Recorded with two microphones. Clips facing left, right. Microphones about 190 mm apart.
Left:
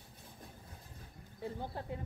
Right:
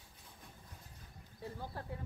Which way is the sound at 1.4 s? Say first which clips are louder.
Left 4 dB; 20° left (ahead or behind).